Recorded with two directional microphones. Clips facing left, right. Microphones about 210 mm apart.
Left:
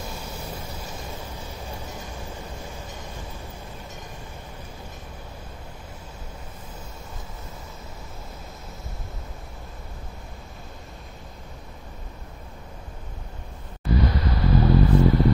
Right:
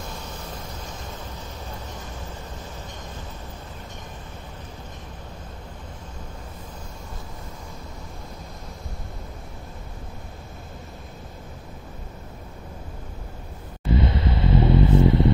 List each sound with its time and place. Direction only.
0.3 s vehicle: 10° left (ahead or behind)
13.9 s vehicle: 25° right (ahead or behind)